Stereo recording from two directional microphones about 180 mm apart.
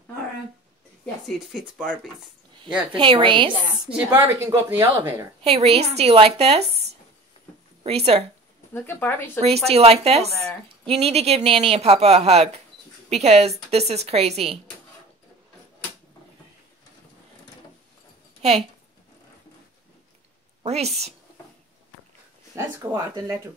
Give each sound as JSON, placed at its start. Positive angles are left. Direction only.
{"t": 1.2, "sound": "speech", "side_deg": 0}
{"t": 2.9, "sound": "a woman's voice", "side_deg": -25}
{"t": 3.9, "sound": "a woman's voice", "side_deg": -15}
{"t": 5.4, "sound": "speech", "side_deg": -35}
{"t": 7.8, "sound": "speech", "side_deg": -35}
{"t": 8.7, "sound": "speech", "side_deg": 10}
{"t": 9.7, "sound": "speech", "side_deg": -35}
{"t": 20.6, "sound": "a woman's voice", "side_deg": -35}
{"t": 22.6, "sound": "a woman's voice", "side_deg": -20}